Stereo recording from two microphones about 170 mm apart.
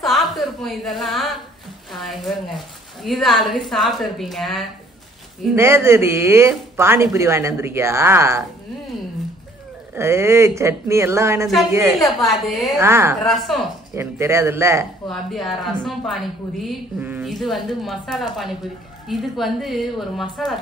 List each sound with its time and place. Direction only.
0.0 s a sound: centre (ahead or behind)
1.9 s a woman's voice: centre (ahead or behind)
5.6 s speech: 15° right (ahead or behind)
9.9 s speech: 15° right (ahead or behind)
12.2 s a woman's voice: centre (ahead or behind)
12.7 s speech: 15° right (ahead or behind)
13.2 s a woman's voice: centre (ahead or behind)
13.9 s speech: 15° right (ahead or behind)
15.0 s a woman's voice: centre (ahead or behind)